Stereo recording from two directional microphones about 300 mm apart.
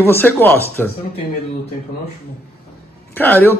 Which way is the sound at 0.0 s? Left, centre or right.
Centre.